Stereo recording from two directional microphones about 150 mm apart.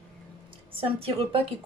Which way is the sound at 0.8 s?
40° right (ahead or behind).